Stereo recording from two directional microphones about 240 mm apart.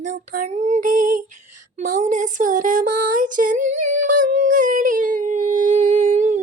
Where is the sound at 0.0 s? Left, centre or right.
Right.